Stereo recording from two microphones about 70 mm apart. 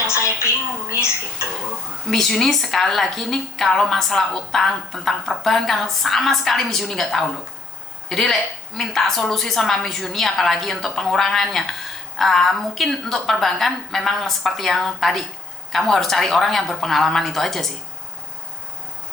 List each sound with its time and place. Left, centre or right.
0.4 s a woman's voice: left
2.0 s a woman's voice: centre